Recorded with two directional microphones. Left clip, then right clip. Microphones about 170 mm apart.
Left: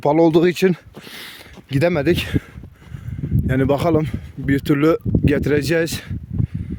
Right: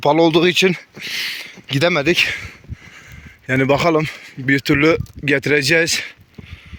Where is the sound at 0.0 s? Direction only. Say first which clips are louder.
Right 1 dB; 35° left (ahead or behind).